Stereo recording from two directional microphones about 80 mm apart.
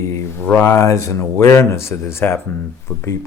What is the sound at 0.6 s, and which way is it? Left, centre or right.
Speech, left.